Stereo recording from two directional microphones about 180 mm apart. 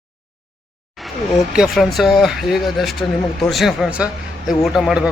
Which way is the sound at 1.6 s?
Centre (ahead or behind).